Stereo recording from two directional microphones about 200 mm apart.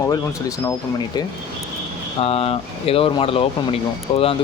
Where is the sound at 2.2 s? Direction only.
30° left (ahead or behind).